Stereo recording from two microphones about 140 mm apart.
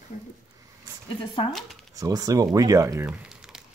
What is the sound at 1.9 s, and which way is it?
Speech, 25° right (ahead or behind).